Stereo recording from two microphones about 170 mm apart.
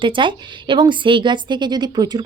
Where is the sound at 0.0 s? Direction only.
30° right (ahead or behind).